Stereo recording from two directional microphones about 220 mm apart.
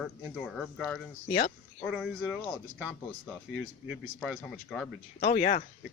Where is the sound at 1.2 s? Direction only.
30° left (ahead or behind).